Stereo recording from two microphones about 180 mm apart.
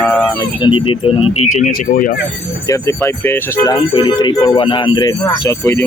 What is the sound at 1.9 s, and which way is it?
Speech, 50° left (ahead or behind).